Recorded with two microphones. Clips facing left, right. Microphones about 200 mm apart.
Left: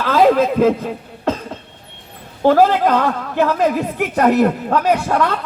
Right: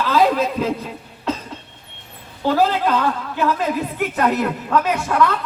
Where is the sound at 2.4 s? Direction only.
50° left (ahead or behind).